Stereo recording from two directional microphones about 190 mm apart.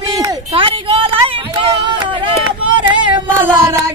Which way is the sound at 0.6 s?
30° right (ahead or behind).